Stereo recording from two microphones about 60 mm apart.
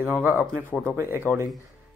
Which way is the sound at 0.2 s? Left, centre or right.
Right.